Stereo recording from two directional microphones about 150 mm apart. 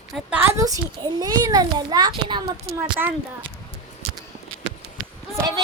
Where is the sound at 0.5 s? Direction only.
25° right (ahead or behind).